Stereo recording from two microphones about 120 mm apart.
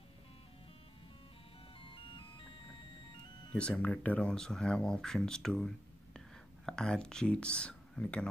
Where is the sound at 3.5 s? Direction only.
10° left (ahead or behind).